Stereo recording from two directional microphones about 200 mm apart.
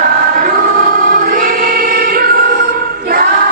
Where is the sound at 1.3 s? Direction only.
45° right (ahead or behind).